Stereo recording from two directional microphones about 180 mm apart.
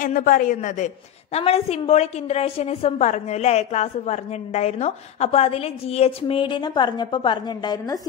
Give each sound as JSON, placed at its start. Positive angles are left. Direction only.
{"t": 0.0, "sound": "a woman's voice", "side_deg": 50}